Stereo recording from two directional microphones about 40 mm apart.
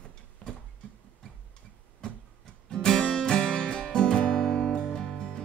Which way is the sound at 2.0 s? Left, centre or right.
Centre.